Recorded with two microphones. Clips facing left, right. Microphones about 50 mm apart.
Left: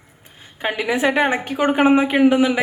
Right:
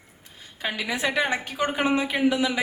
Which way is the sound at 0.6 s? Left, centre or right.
Left.